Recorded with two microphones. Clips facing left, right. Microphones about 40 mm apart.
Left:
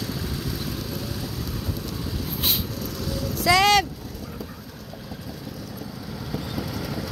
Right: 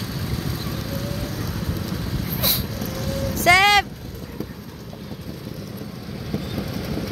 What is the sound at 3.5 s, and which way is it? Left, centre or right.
Vehicle, right.